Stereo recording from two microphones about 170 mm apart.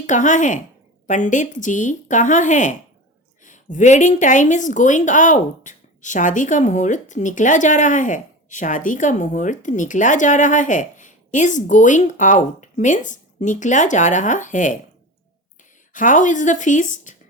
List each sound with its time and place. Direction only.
0.0 s a woman's voice: 45° left (ahead or behind)
15.9 s a woman's voice: 50° left (ahead or behind)